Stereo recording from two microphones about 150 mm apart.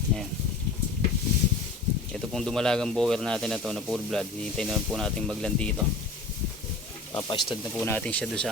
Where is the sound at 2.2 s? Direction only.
Centre (ahead or behind).